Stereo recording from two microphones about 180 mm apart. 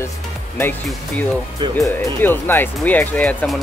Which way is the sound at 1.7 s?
15° left (ahead or behind).